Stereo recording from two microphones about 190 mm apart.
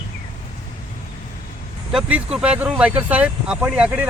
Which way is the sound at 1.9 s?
5° right (ahead or behind).